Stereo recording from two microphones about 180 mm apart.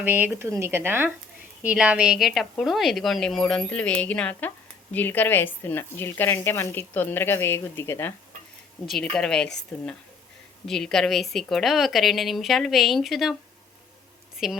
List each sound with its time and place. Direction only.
0.0 s a woman's voice: 10° right (ahead or behind)
10.7 s a woman's voice: centre (ahead or behind)
14.3 s a woman's voice: centre (ahead or behind)